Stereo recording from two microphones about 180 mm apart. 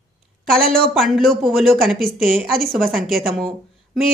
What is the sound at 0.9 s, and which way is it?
A woman's voice, centre (ahead or behind).